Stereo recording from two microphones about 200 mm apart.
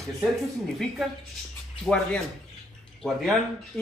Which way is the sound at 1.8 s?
5° left (ahead or behind).